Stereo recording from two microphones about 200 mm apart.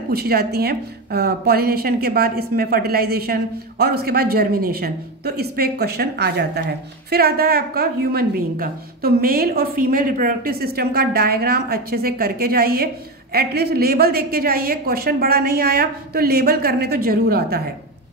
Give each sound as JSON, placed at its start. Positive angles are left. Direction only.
{"t": 0.1, "sound": "a woman's voice", "side_deg": -50}